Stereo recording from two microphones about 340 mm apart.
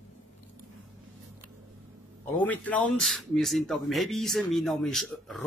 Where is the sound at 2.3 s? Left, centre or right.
Centre.